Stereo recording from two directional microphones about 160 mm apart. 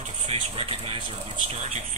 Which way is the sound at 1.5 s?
45° right (ahead or behind).